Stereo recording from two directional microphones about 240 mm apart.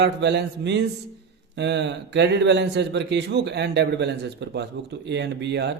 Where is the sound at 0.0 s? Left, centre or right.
Right.